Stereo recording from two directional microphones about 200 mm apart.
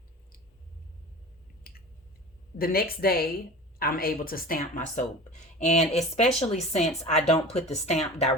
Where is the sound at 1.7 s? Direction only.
45° left (ahead or behind).